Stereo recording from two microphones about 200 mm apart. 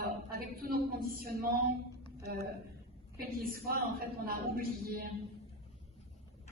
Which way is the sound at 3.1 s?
50° right (ahead or behind).